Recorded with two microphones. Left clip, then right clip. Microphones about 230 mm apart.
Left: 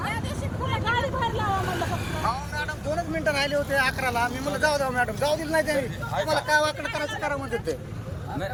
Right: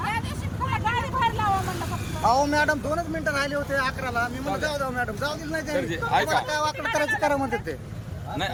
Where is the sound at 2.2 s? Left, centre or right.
Right.